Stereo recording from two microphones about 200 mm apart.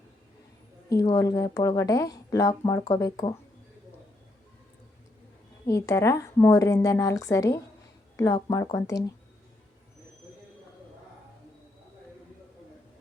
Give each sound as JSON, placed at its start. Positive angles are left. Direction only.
{"t": 0.9, "sound": "speech", "side_deg": 15}
{"t": 5.6, "sound": "speech", "side_deg": 15}